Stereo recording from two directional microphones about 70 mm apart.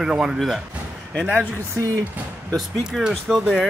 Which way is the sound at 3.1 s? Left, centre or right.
Centre.